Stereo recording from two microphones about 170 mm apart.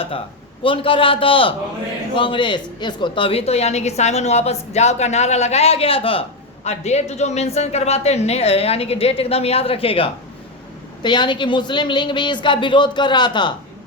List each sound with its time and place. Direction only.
0.6 s a woman's voice: 30° left (ahead or behind)